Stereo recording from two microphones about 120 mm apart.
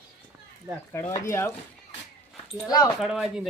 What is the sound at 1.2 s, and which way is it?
Speech, 25° left (ahead or behind).